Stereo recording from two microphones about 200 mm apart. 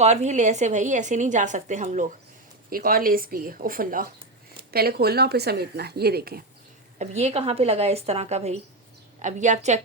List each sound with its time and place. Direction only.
0.0 s a woman's voice: 35° right (ahead or behind); by 6.4 s 50° right (ahead or behind)
7.0 s a woman's voice: 35° right (ahead or behind)